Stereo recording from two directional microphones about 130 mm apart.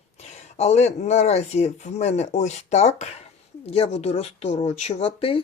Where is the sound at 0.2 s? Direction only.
55° left (ahead or behind).